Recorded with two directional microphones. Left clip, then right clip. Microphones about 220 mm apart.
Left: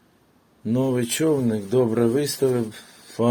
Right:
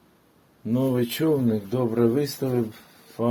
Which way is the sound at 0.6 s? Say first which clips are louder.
Left 1 dB; 20° left (ahead or behind).